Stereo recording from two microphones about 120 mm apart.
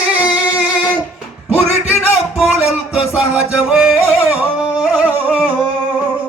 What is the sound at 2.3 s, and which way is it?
Music, 5° right (ahead or behind).